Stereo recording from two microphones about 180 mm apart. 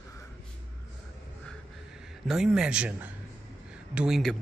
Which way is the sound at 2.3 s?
5° right (ahead or behind).